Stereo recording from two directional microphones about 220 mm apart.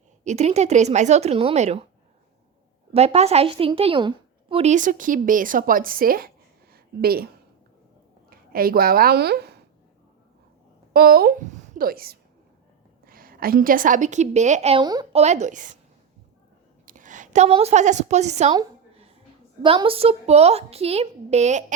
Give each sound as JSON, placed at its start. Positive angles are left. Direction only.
{"t": 0.3, "sound": "a woman's voice", "side_deg": -30}
{"t": 2.9, "sound": "a woman's voice", "side_deg": -30}
{"t": 6.7, "sound": "a sound", "side_deg": -45}
{"t": 8.3, "sound": "a woman's voice", "side_deg": -40}
{"t": 10.9, "sound": "a woman's voice", "side_deg": -45}
{"t": 15.2, "sound": "a woman's voice", "side_deg": -30}
{"t": 16.8, "sound": "a woman's voice", "side_deg": -35}
{"t": 18.5, "sound": "a sound", "side_deg": -25}
{"t": 19.6, "sound": "a woman's voice", "side_deg": -25}